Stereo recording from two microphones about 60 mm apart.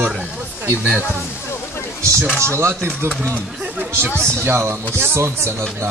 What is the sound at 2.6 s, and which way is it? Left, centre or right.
Speech, right.